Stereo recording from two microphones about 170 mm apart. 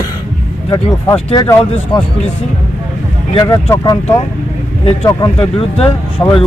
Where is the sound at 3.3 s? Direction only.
25° left (ahead or behind).